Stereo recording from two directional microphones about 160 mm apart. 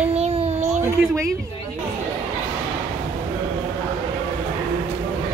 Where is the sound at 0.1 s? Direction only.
40° right (ahead or behind).